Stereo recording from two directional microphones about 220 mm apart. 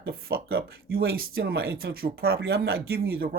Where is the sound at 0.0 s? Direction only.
45° right (ahead or behind).